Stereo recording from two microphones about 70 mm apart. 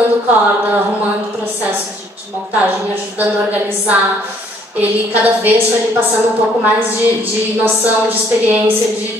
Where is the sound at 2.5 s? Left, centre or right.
Right.